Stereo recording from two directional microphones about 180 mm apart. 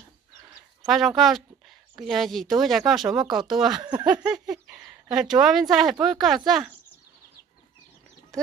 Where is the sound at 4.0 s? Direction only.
25° right (ahead or behind).